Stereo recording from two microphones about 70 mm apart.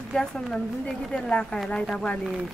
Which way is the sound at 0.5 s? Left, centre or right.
Centre.